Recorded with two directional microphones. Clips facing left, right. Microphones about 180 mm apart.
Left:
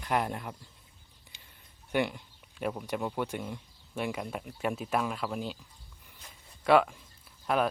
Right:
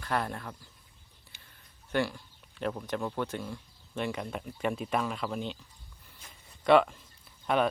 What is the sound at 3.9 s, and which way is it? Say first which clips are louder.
Speech: even; 5° left (ahead or behind).